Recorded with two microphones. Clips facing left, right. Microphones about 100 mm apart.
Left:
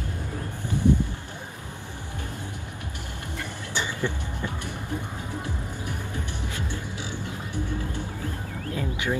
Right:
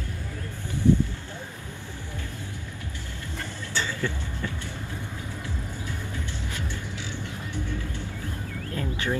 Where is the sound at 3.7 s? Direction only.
15° left (ahead or behind).